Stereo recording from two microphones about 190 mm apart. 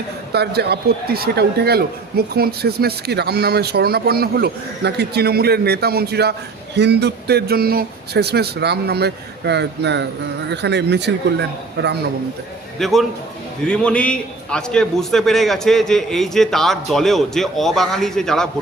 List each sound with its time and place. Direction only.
0.3 s a man's voice: 60° right (ahead or behind)
12.8 s a man's voice: centre (ahead or behind)